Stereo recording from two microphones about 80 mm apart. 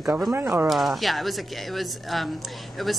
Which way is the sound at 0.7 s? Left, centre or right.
Centre.